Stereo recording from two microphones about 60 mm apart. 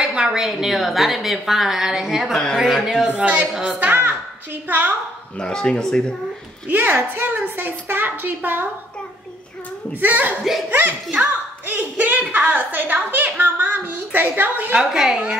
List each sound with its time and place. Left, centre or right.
0.0 s a woman's voice: centre
2.3 s a woman's voice: centre
3.2 s a woman's voice: right
5.4 s speech: centre
6.7 s a woman's voice: right
9.9 s a woman's voice: right
14.8 s speech: centre